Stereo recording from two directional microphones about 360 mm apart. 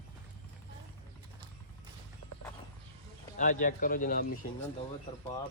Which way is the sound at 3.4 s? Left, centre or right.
Left.